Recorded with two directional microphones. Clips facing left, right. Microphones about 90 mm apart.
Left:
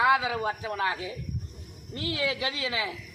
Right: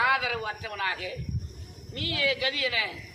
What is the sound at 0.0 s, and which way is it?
Speech, 25° left (ahead or behind).